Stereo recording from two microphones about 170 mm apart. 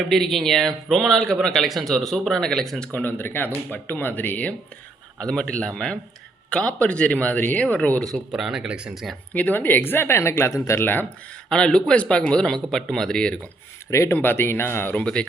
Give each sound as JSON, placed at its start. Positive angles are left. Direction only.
{"t": 0.1, "sound": "speech", "side_deg": 0}
{"t": 9.3, "sound": "speech", "side_deg": 10}
{"t": 13.9, "sound": "speech", "side_deg": 15}